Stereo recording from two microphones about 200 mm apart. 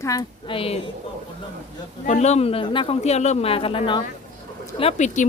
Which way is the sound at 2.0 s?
35° left (ahead or behind).